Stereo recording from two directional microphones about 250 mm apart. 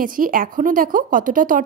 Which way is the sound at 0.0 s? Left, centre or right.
Right.